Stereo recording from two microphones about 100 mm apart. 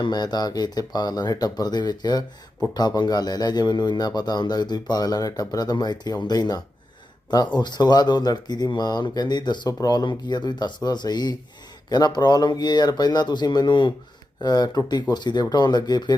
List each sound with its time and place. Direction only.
0.0 s a man's voice: 45° left (ahead or behind)